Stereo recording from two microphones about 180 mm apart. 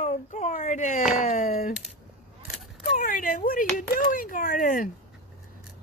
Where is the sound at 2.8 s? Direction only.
45° left (ahead or behind).